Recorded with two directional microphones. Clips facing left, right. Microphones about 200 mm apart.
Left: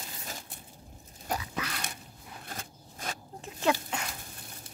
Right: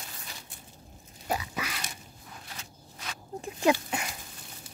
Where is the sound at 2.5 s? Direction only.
50° left (ahead or behind).